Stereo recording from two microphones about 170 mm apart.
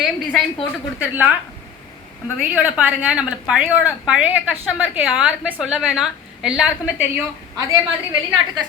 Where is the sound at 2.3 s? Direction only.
5° right (ahead or behind).